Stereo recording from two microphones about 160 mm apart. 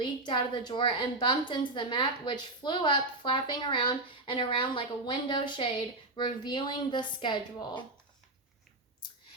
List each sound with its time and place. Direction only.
0.0 s a woman's voice: 30° left (ahead or behind)